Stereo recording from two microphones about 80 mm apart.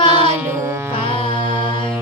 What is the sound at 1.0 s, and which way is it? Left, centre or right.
Music, left.